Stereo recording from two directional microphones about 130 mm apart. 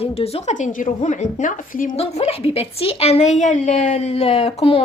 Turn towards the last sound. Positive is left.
turn(degrees=50)  # may be behind; listen again after turning